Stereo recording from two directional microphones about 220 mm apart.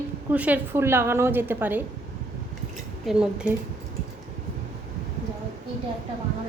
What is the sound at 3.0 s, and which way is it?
Speech, 5° right (ahead or behind).